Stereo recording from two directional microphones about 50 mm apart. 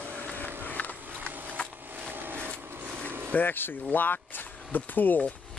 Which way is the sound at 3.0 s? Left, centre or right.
Right.